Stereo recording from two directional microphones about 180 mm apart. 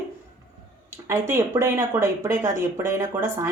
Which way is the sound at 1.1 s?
15° right (ahead or behind).